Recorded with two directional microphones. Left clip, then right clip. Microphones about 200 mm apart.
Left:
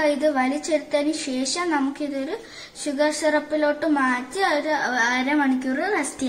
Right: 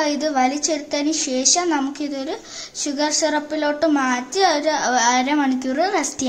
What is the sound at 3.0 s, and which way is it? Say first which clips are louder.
A woman's voice: even; 60° right (ahead or behind).